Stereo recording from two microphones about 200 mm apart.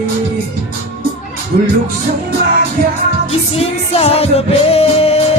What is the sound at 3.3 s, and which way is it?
Music, 30° left (ahead or behind).